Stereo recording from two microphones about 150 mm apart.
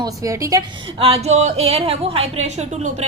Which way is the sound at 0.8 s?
40° right (ahead or behind).